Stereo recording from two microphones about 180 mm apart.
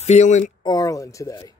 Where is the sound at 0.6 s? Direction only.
20° left (ahead or behind).